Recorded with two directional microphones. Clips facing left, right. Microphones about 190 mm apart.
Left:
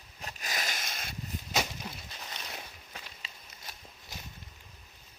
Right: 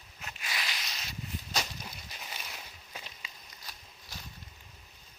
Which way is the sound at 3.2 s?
25° left (ahead or behind).